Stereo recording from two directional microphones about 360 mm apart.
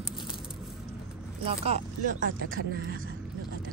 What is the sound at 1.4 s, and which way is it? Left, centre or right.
Speech, centre.